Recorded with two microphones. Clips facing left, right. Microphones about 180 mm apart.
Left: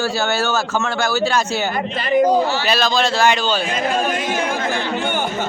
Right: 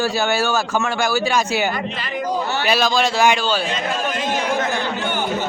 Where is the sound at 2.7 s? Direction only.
10° right (ahead or behind).